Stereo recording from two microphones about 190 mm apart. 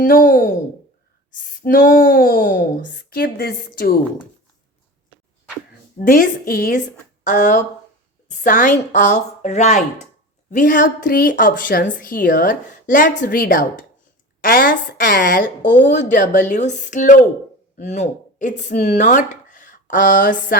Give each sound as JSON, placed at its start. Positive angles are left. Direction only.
{"t": 0.0, "sound": "speech", "side_deg": 45}
{"t": 6.0, "sound": "a woman's voice", "side_deg": 45}